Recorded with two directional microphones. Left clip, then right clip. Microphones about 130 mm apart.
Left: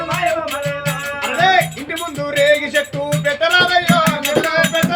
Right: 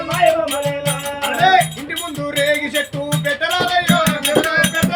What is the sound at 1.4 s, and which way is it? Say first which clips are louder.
Music: right 1 dB; 15° left (ahead or behind).